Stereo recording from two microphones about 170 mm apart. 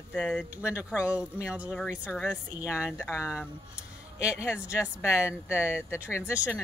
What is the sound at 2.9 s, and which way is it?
Speech, 15° left (ahead or behind).